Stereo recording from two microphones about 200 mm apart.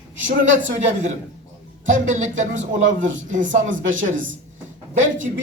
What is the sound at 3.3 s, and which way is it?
Speech, 40° right (ahead or behind).